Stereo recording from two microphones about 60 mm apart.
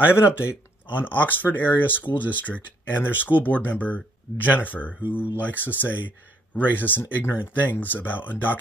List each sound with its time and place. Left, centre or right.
0.0 s speech: left
0.9 s speech: left